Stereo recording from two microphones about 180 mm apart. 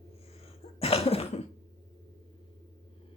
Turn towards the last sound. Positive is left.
turn(degrees=35)  # may be behind; listen again after turning